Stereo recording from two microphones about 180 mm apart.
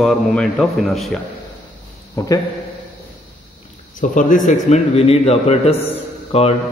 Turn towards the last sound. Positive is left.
turn(degrees=35)  # may be behind; listen again after turning